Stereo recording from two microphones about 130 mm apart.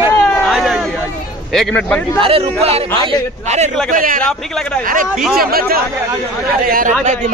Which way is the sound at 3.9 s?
90° right.